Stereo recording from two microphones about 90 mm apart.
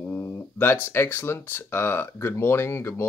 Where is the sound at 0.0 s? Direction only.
25° left (ahead or behind).